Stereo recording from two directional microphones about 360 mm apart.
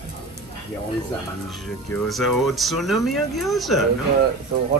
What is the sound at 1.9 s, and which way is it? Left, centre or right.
Speech, centre.